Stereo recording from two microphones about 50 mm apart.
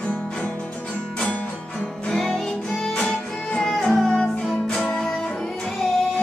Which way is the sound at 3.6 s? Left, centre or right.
Centre.